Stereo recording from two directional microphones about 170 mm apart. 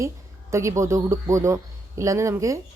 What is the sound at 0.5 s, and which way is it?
A woman's voice, 15° right (ahead or behind).